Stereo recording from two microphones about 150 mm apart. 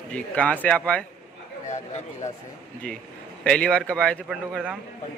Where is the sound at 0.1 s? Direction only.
10° left (ahead or behind).